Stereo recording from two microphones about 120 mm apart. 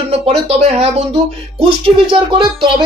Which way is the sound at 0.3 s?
60° right (ahead or behind).